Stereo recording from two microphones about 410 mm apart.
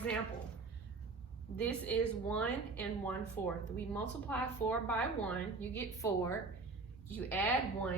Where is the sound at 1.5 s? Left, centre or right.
Centre.